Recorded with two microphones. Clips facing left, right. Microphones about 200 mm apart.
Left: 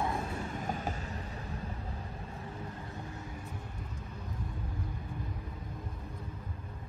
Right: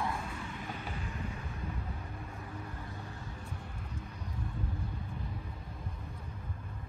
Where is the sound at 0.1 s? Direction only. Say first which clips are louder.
Left 4 dB; 40° left (ahead or behind).